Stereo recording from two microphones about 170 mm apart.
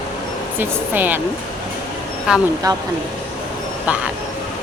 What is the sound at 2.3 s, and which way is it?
Speech, 5° right (ahead or behind).